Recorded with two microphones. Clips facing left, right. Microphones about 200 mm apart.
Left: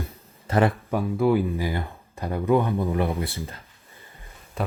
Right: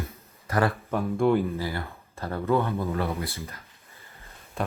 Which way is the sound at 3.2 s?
30° left (ahead or behind).